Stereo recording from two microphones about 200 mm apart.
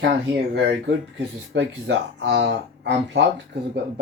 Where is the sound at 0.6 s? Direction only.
65° right (ahead or behind).